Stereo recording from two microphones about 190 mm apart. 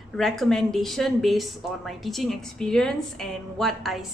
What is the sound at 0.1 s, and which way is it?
A woman's voice, centre (ahead or behind).